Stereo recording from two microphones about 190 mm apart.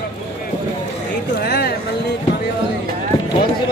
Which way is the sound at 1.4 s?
60° left (ahead or behind).